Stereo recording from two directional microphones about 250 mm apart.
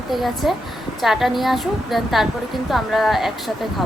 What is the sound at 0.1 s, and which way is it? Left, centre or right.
A woman's voice, centre.